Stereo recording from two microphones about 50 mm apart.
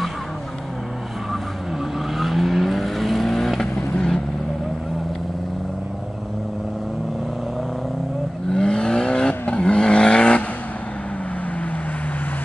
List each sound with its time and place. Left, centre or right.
2.1 s vehicle: centre
8.5 s vehicle: centre